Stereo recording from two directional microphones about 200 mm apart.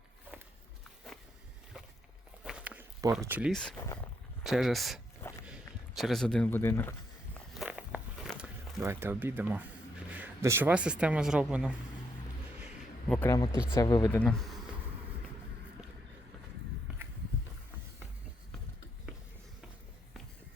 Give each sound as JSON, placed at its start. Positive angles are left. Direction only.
{"t": 2.4, "sound": "walk", "side_deg": -5}
{"t": 3.5, "sound": "speech", "side_deg": 5}
{"t": 5.2, "sound": "walk", "side_deg": 10}
{"t": 6.0, "sound": "speech", "side_deg": 0}
{"t": 7.5, "sound": "walk", "side_deg": -5}
{"t": 8.8, "sound": "speech", "side_deg": -10}
{"t": 13.1, "sound": "speech", "side_deg": 10}
{"t": 14.2, "sound": "speech", "side_deg": 0}